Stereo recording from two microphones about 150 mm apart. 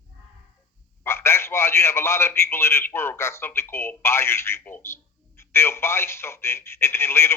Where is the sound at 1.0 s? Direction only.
15° left (ahead or behind).